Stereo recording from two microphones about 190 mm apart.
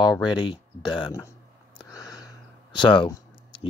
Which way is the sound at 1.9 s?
20° left (ahead or behind).